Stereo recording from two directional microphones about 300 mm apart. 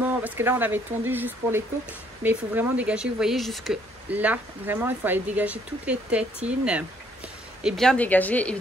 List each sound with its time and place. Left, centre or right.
0.0 s speech: centre
7.6 s speech: centre